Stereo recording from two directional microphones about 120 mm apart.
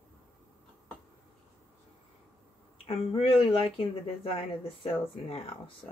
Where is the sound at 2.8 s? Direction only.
50° left (ahead or behind).